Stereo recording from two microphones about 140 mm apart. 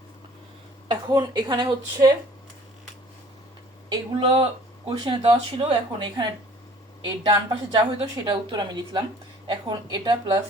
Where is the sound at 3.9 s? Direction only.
40° right (ahead or behind).